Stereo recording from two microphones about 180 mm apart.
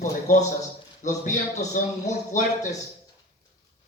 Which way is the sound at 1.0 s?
45° left (ahead or behind).